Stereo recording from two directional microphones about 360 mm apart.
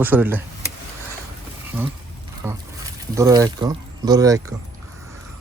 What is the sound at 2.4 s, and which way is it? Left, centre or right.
Speech, centre.